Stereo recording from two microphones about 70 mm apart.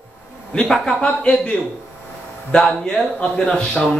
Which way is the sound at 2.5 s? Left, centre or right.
Centre.